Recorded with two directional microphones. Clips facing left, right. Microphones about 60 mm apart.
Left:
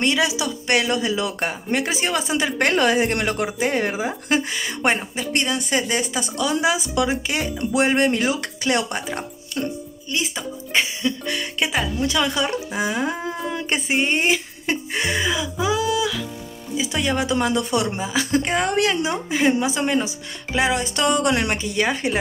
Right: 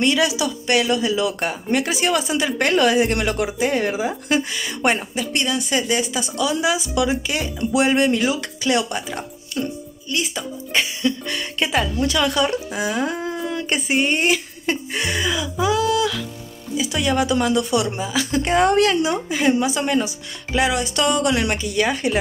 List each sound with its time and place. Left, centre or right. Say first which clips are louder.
0.0 s speech: right 2 dB; left
0.7 s speech: right 1 dB; left
10.1 s speech: right 1 dB; centre
16.7 s speech: right 2 dB; left
18.4 s speech: right 5 dB; centre
18.8 s speech: right 3 dB; centre